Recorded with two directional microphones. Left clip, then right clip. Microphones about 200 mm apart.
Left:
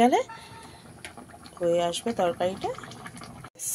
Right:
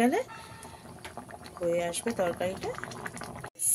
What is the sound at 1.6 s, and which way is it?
Speech, 15° left (ahead or behind).